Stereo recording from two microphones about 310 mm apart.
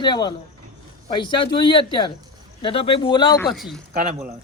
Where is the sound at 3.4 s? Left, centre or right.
Centre.